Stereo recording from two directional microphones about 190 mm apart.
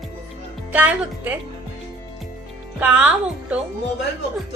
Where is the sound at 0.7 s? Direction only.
10° right (ahead or behind).